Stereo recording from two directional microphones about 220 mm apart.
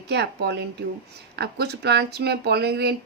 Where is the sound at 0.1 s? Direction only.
50° right (ahead or behind).